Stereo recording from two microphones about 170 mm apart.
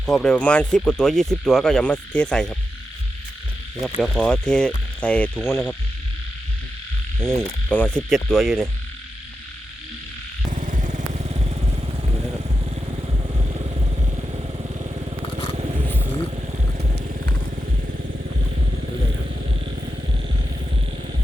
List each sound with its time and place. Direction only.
0.0 s speech: 5° left (ahead or behind)
4.0 s speech: 5° left (ahead or behind)
7.2 s speech: 5° left (ahead or behind)
10.5 s vehicle: 45° right (ahead or behind)
18.5 s vehicle: 65° right (ahead or behind)